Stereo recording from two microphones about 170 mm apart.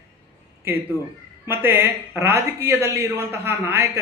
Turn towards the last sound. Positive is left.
turn(degrees=-15)  # may be behind; listen again after turning